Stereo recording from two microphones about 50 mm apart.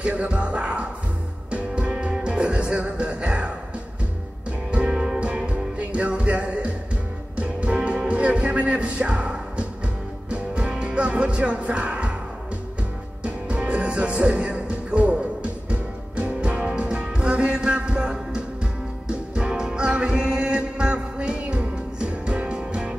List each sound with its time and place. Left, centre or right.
0.1 s music: right
4.9 s music: centre
13.2 s music: right